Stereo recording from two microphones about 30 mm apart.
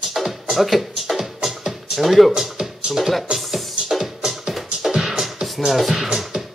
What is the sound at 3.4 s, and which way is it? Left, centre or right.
Music, centre.